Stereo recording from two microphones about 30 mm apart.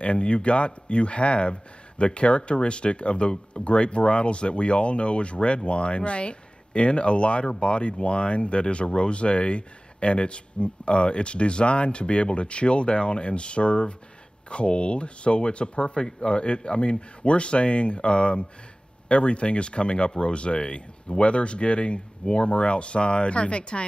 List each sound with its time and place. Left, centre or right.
0.0 s speech: left